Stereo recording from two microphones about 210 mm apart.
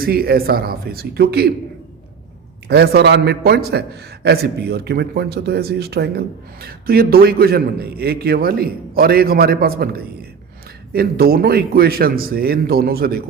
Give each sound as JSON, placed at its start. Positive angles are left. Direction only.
{"t": 0.0, "sound": "a man's voice", "side_deg": -45}
{"t": 2.6, "sound": "a man's voice", "side_deg": -50}